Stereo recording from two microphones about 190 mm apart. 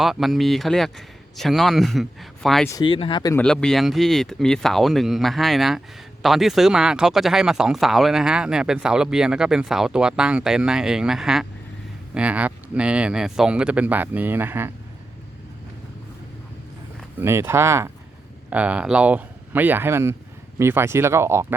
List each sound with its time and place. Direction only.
0.0 s speech: centre (ahead or behind)
2.6 s speech: 20° left (ahead or behind)
3.3 s speech: 5° left (ahead or behind); by 14.7 s 10° right (ahead or behind)
17.2 s speech: 15° right (ahead or behind)